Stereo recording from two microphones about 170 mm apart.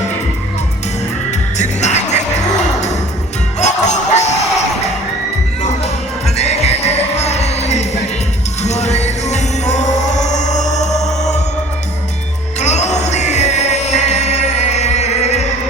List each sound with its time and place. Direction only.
1.5 s music: 45° left (ahead or behind)
3.6 s music: 45° left (ahead or behind)
6.3 s music: 40° left (ahead or behind)
12.5 s music: 45° left (ahead or behind)